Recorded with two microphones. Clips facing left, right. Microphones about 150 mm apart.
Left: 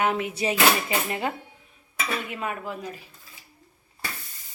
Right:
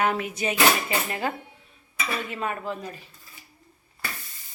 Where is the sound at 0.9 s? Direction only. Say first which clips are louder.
Even; 20° left (ahead or behind).